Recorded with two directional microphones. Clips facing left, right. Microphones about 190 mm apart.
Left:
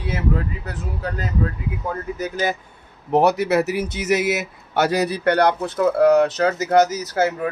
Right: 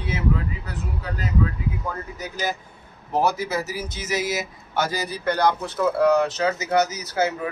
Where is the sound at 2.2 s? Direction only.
55° left (ahead or behind).